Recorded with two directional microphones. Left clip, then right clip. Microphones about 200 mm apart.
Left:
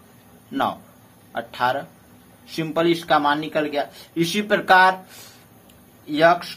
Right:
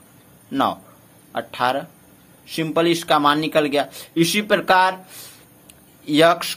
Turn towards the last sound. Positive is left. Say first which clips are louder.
# right 1 dB
turn(degrees=-40)  # may be behind; listen again after turning